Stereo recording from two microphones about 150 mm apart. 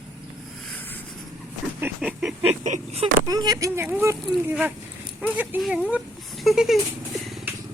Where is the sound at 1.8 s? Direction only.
5° right (ahead or behind).